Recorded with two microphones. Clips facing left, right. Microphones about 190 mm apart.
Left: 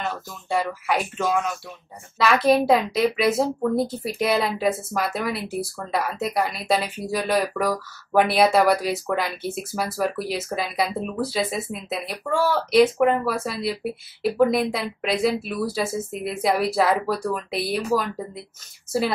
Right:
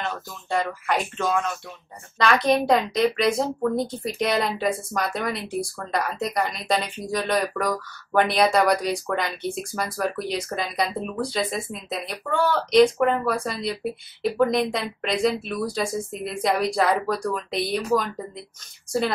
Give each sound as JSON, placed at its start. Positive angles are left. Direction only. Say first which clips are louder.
{"t": 0.0, "sound": "a woman's voice", "louder": "left 1 dB", "side_deg": 5}